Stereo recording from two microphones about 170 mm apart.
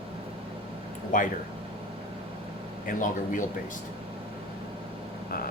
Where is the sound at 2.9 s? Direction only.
50° left (ahead or behind).